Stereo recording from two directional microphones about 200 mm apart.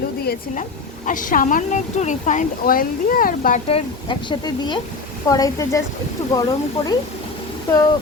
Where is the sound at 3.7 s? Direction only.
25° left (ahead or behind).